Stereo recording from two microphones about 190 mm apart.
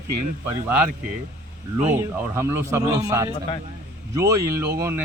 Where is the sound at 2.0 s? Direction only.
15° right (ahead or behind).